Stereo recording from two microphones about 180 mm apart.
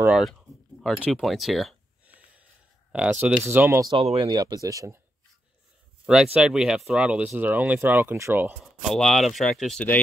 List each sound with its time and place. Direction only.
0.0 s speech: centre (ahead or behind)
2.9 s speech: 5° right (ahead or behind)
3.9 s speech: 30° right (ahead or behind)
6.0 s speech: 5° right (ahead or behind)
8.8 s speech: centre (ahead or behind)